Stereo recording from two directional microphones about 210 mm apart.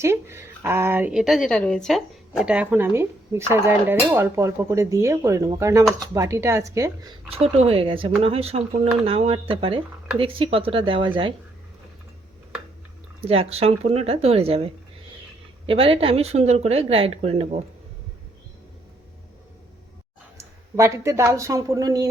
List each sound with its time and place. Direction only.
0.0 s a woman's voice: 10° right (ahead or behind)
7.3 s speech: 30° right (ahead or behind)
13.2 s speech: 30° right (ahead or behind)
20.7 s speech: 15° right (ahead or behind)